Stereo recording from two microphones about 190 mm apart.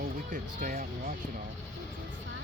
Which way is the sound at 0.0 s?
40° right (ahead or behind).